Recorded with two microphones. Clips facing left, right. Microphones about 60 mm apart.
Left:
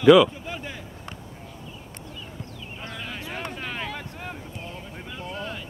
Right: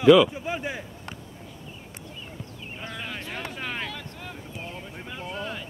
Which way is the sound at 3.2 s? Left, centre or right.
Centre.